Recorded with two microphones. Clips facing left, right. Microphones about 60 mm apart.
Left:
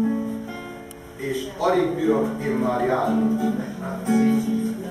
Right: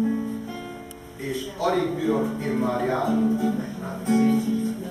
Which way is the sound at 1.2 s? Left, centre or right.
Centre.